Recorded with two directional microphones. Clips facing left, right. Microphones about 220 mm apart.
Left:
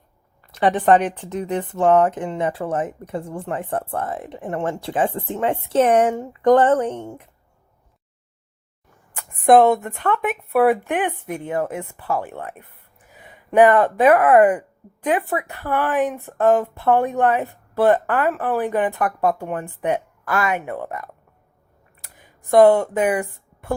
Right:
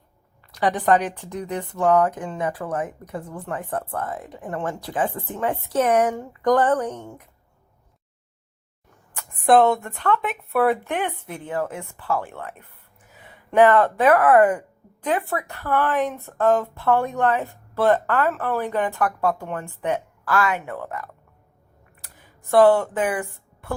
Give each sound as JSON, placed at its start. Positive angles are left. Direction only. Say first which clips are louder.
{"t": 0.5, "sound": "speech", "louder": "left 4 dB", "side_deg": 25}
{"t": 9.1, "sound": "speech", "louder": "left 3 dB", "side_deg": 15}
{"t": 22.1, "sound": "speech", "louder": "left 3 dB", "side_deg": 15}